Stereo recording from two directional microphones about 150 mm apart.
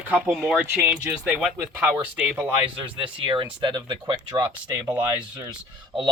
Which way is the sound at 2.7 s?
35° right (ahead or behind).